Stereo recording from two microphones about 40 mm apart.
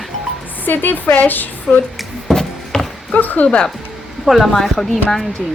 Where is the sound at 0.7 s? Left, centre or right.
Left.